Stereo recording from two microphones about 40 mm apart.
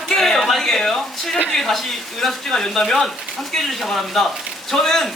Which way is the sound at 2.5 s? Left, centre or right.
Centre.